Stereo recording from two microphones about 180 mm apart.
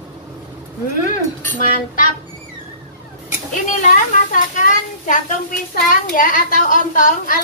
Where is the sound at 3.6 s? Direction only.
45° left (ahead or behind).